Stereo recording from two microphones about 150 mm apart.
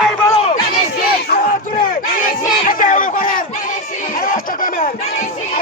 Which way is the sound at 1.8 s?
70° left (ahead or behind).